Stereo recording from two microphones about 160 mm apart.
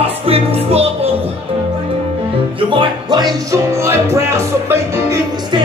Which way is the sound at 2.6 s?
30° right (ahead or behind).